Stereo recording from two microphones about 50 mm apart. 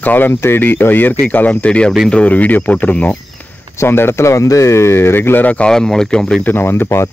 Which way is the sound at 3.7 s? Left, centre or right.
Left.